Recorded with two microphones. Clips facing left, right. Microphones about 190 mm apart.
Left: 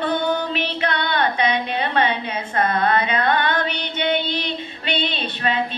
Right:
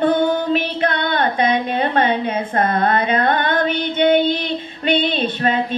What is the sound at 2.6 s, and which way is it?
Female singing, 50° right (ahead or behind).